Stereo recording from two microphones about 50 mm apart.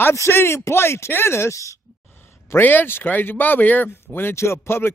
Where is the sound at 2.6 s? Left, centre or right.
Left.